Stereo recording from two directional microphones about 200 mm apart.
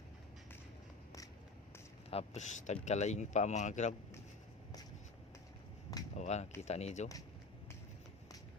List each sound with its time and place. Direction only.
2.0 s speech: 35° left (ahead or behind)
6.1 s speech: 35° left (ahead or behind)